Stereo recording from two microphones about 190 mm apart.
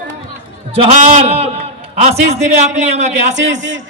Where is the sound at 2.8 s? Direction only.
35° right (ahead or behind).